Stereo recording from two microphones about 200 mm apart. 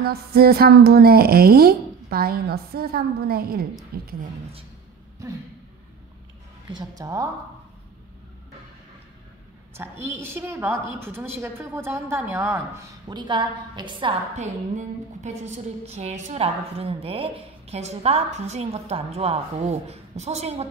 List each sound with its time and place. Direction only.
0.0 s a woman's voice: 50° right (ahead or behind)
6.7 s a woman's voice: 20° right (ahead or behind)
9.8 s a woman's voice: 15° right (ahead or behind); by 20.6 s 30° right (ahead or behind)